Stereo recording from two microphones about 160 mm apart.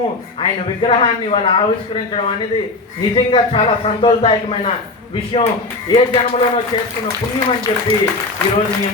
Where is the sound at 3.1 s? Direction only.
35° left (ahead or behind).